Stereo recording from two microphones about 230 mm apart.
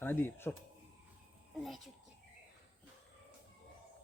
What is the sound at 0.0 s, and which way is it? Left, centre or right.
Speech, centre.